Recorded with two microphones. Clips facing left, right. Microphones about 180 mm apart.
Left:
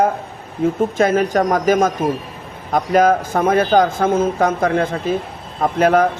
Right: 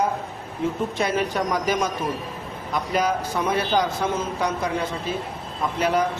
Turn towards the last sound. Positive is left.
turn(degrees=50)  # may be behind; listen again after turning